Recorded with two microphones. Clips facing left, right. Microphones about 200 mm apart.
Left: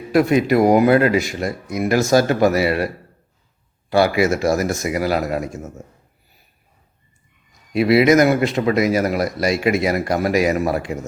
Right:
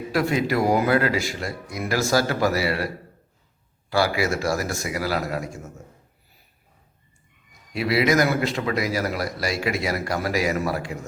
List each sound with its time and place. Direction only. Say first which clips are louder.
0.1 s speech: left 8 dB; 20° left (ahead or behind)
3.8 s speech: left 6 dB; 20° left (ahead or behind)
7.7 s speech: left 7 dB; 20° left (ahead or behind)